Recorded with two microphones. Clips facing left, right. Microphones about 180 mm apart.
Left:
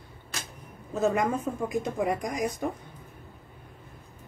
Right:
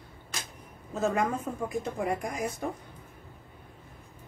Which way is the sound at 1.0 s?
20° left (ahead or behind).